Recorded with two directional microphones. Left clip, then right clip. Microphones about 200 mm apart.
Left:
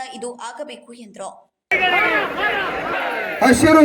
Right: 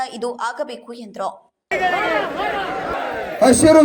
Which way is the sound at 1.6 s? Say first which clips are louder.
Left 2 dB; 50° right (ahead or behind).